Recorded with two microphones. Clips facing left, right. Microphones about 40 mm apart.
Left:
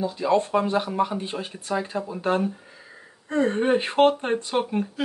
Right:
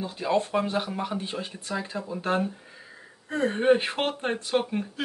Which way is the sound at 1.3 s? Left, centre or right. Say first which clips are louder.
Left 4 dB; left.